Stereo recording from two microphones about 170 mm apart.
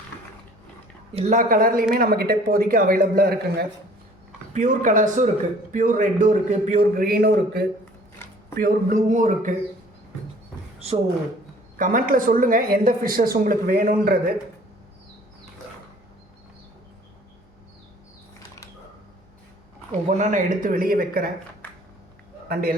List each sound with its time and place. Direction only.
1.1 s speech: 45° right (ahead or behind); by 3.7 s 65° right (ahead or behind)
4.5 s speech: 50° right (ahead or behind); by 7.7 s 65° right (ahead or behind)
8.2 s a sound: 10° left (ahead or behind)
8.6 s speech: 50° right (ahead or behind)
10.8 s a sound: 35° right (ahead or behind)
11.8 s speech: 50° right (ahead or behind)
20.1 s speech: 45° right (ahead or behind)